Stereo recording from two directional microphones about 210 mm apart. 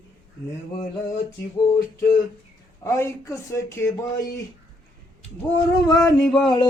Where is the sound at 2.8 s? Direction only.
15° left (ahead or behind).